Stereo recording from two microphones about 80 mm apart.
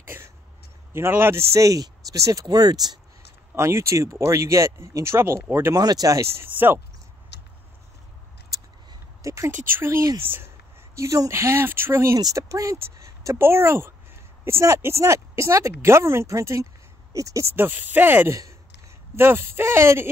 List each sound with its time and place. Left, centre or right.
0.1 s a sound: right
0.9 s speech: right
3.5 s speech: right
5.8 s speech: right
6.3 s speech: right
9.2 s speech: right
11.0 s speech: right
12.2 s speech: right
17.6 s speech: right
18.3 s speech: right